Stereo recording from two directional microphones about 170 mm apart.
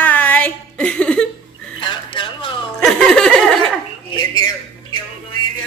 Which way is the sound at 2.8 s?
5° left (ahead or behind).